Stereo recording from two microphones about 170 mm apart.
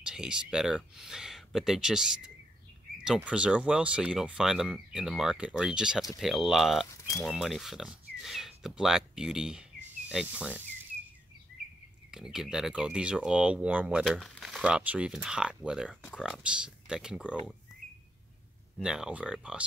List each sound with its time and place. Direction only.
0.0 s speech: 5° right (ahead or behind)
6.9 s speech: 20° left (ahead or behind)
7.2 s speech: centre (ahead or behind)
12.1 s speech: 5° right (ahead or behind)
18.8 s speech: 5° right (ahead or behind)